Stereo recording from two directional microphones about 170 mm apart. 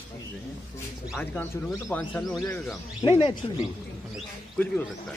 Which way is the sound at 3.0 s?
30° left (ahead or behind).